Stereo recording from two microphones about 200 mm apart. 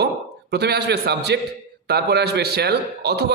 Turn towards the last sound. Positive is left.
turn(degrees=-55)  # may be behind; listen again after turning